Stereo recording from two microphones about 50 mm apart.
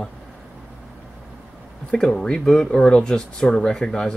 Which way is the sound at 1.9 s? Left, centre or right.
Centre.